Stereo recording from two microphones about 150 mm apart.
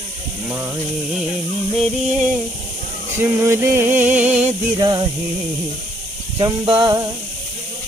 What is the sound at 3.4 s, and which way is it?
Music, 15° right (ahead or behind).